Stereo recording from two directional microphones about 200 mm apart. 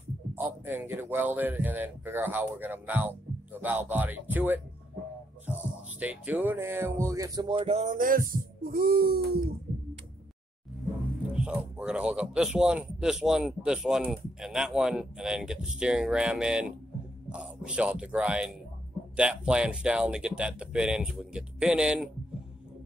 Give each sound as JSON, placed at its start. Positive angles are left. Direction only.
{"t": 0.3, "sound": "speech", "side_deg": -10}
{"t": 5.5, "sound": "music", "side_deg": -5}
{"t": 5.9, "sound": "speech", "side_deg": -10}
{"t": 11.3, "sound": "speech", "side_deg": -5}